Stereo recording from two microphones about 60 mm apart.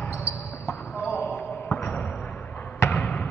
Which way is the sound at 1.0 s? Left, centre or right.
Centre.